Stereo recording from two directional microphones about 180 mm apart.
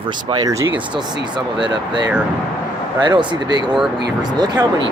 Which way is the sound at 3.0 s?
25° right (ahead or behind).